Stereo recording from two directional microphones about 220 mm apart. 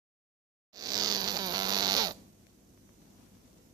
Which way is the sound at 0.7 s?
15° right (ahead or behind).